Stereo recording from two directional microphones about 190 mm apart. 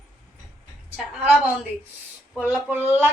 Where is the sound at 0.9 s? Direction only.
5° right (ahead or behind).